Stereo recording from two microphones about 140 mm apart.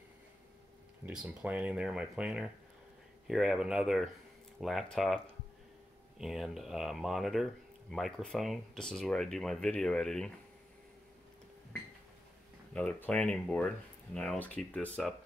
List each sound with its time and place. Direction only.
1.0 s speech: 5° right (ahead or behind)
12.7 s speech: 10° left (ahead or behind)